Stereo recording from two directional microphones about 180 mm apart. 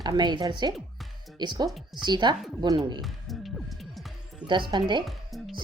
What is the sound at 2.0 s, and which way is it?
Speech, 25° right (ahead or behind).